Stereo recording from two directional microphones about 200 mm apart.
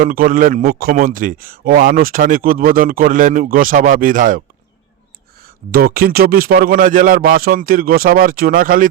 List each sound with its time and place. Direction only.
0.0 s a man's voice: 45° right (ahead or behind)
5.7 s a man's voice: 50° right (ahead or behind)